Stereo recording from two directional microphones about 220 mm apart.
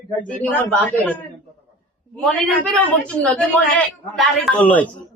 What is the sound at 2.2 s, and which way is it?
A man's voice, 5° left (ahead or behind).